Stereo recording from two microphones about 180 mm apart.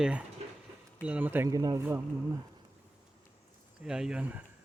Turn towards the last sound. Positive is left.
turn(degrees=-10)  # may be behind; listen again after turning